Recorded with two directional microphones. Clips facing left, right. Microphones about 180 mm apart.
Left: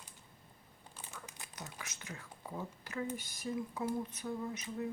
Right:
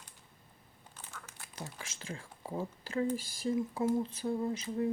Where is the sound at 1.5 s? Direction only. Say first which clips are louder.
Right 5 dB; 30° right (ahead or behind).